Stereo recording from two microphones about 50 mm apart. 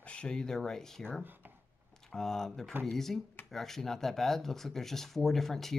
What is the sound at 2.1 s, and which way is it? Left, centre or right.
Speech, centre.